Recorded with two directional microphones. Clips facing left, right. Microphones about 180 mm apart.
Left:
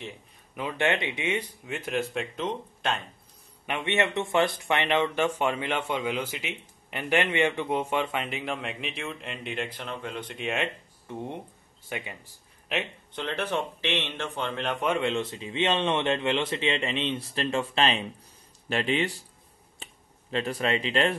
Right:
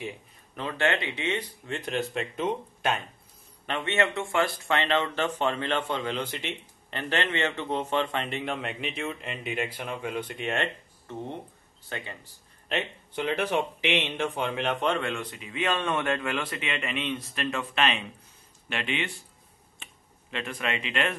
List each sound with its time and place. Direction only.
0.6 s a man's voice: 15° left (ahead or behind); by 3.0 s 5° right (ahead or behind)
3.6 s a man's voice: 15° left (ahead or behind)
11.1 s a man's voice: 10° left (ahead or behind)
13.1 s a man's voice: 10° right (ahead or behind)
15.0 s speech: 25° left (ahead or behind)
19.8 s finger snapping: 35° left (ahead or behind)